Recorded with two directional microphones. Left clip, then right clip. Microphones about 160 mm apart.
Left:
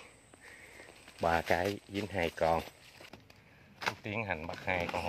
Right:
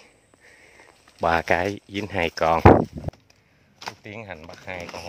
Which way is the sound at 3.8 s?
5° right (ahead or behind).